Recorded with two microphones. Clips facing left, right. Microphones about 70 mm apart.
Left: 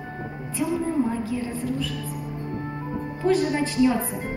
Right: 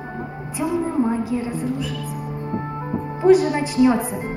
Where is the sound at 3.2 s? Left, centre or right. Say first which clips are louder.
Right 8 dB; centre.